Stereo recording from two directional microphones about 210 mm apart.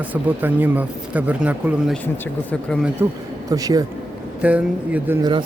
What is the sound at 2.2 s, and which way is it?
Speech, 5° left (ahead or behind).